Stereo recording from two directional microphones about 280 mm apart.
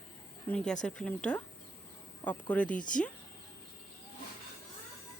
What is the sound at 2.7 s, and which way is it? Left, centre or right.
Speech, left.